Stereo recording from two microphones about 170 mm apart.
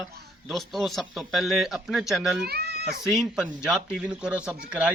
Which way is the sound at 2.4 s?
70° right (ahead or behind).